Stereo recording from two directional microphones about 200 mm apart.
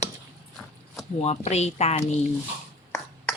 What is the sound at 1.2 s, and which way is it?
Speech, 35° left (ahead or behind).